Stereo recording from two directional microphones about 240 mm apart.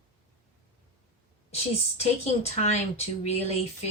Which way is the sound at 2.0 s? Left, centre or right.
Left.